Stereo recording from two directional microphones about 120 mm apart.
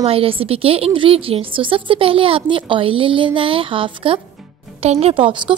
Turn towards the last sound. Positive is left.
turn(degrees=-45)  # may be behind; listen again after turning